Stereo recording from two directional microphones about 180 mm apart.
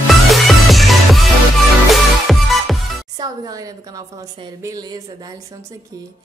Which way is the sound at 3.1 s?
20° right (ahead or behind).